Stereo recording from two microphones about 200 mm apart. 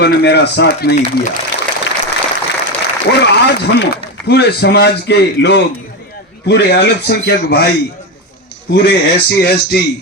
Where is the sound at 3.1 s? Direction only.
55° left (ahead or behind).